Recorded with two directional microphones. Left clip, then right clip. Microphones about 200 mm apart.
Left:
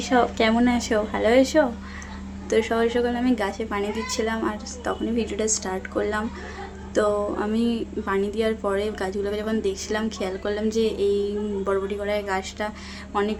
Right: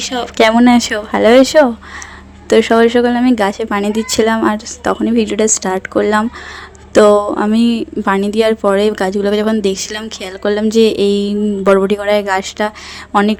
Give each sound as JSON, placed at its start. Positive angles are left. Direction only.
{"t": 0.1, "sound": "speech", "side_deg": 0}
{"t": 0.5, "sound": "a woman's voice", "side_deg": -40}